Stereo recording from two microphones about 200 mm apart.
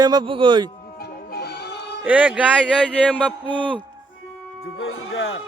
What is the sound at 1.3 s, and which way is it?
Music, 55° left (ahead or behind).